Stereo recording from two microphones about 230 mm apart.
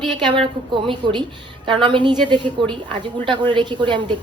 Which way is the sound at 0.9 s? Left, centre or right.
Centre.